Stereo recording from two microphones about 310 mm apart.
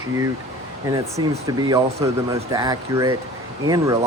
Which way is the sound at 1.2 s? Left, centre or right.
Right.